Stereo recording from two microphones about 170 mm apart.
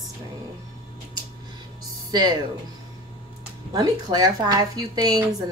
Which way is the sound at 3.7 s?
25° right (ahead or behind).